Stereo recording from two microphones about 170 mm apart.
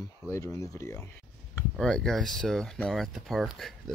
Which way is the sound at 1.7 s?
5° left (ahead or behind).